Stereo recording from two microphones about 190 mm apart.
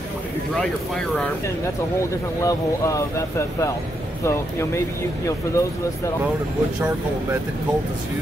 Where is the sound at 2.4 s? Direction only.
15° left (ahead or behind).